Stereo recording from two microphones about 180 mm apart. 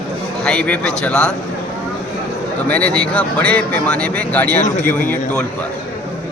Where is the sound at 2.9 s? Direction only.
5° left (ahead or behind).